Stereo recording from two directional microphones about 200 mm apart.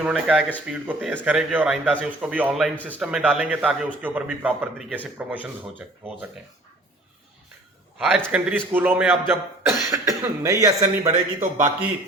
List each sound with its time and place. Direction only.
0.0 s a man's voice: 5° right (ahead or behind)
7.9 s speech: 5° right (ahead or behind)
11.0 s speech: 35° right (ahead or behind)